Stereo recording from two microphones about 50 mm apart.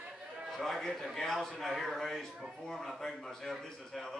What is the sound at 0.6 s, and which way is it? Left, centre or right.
A man's voice, centre.